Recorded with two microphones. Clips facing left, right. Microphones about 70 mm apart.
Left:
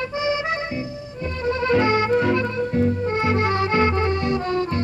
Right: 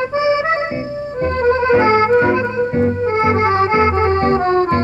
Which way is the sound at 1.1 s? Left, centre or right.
Right.